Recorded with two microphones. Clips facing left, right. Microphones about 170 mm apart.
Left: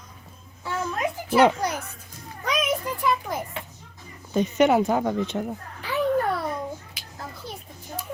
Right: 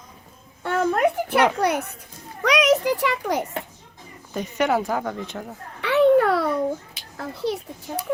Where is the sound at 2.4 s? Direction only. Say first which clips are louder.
Right 8 dB; 75° right (ahead or behind).